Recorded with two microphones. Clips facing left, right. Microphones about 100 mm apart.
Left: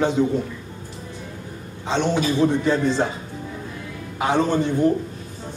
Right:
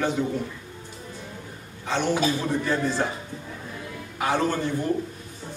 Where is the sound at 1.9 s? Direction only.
20° left (ahead or behind).